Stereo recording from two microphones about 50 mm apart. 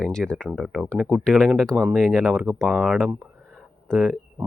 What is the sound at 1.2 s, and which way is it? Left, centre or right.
Speech, centre.